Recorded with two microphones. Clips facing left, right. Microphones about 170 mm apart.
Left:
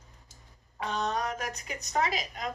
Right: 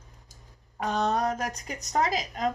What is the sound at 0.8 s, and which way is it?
Speech, 40° right (ahead or behind).